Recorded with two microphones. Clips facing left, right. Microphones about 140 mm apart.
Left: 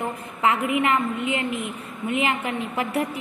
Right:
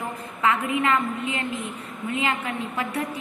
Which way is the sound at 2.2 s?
25° left (ahead or behind).